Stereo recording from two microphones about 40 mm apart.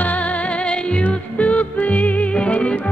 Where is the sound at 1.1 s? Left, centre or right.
Left.